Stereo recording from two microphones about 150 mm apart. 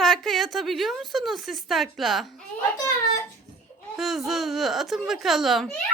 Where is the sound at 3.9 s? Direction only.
Centre (ahead or behind).